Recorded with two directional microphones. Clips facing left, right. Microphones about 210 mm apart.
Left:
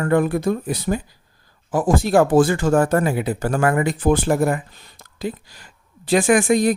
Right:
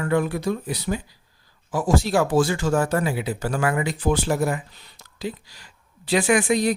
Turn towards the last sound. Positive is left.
turn(degrees=50)  # may be behind; listen again after turning